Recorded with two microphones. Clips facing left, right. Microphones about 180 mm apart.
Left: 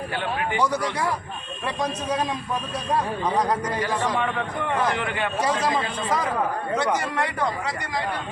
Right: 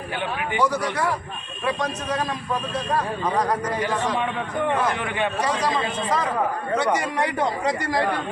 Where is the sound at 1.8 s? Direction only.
10° left (ahead or behind).